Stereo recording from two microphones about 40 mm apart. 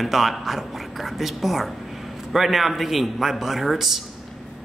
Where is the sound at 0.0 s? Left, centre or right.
Centre.